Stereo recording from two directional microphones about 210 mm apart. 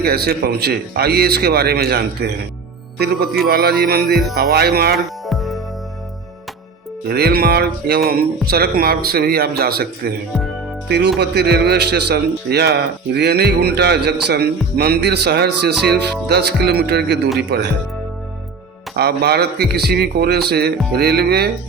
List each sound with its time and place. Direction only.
0.0 s speech: 50° right (ahead or behind)
3.5 s speech: 45° right (ahead or behind)
4.9 s music: centre (ahead or behind)
7.1 s speech: 50° right (ahead or behind)
18.9 s speech: 50° right (ahead or behind)